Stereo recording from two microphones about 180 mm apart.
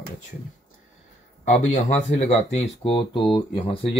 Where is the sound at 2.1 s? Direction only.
35° left (ahead or behind).